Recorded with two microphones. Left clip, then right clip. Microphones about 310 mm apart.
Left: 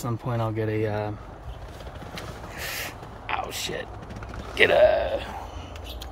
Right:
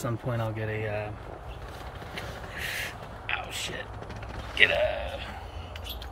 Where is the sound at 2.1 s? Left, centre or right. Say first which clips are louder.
Even; centre.